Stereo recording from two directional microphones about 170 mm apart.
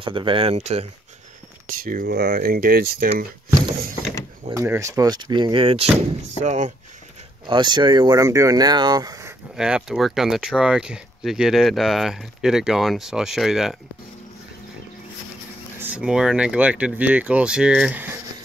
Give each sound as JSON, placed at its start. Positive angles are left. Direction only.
{"t": 0.0, "sound": "speech", "side_deg": -30}
{"t": 1.7, "sound": "speech", "side_deg": -55}
{"t": 4.6, "sound": "speech", "side_deg": -15}
{"t": 6.4, "sound": "speech", "side_deg": -45}
{"t": 7.4, "sound": "speech", "side_deg": -25}
{"t": 9.6, "sound": "speech", "side_deg": -5}
{"t": 15.8, "sound": "speech", "side_deg": -5}